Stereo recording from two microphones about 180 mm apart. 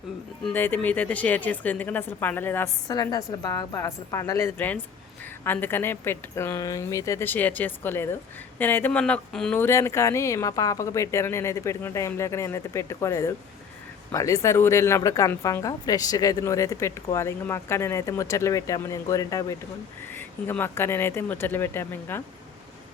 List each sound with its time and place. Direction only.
0.4 s a woman's voice: 10° left (ahead or behind)